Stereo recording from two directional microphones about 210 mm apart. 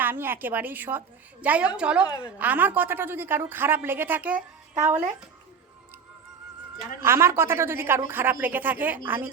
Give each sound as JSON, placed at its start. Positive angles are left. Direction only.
{"t": 0.0, "sound": "a woman's voice", "side_deg": -10}
{"t": 2.0, "sound": "a woman's voice", "side_deg": 20}
{"t": 2.4, "sound": "a woman's voice", "side_deg": -10}
{"t": 4.4, "sound": "speech", "side_deg": -35}
{"t": 7.0, "sound": "a woman's voice", "side_deg": -10}